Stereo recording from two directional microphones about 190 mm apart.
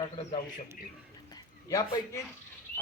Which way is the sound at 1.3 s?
15° left (ahead or behind).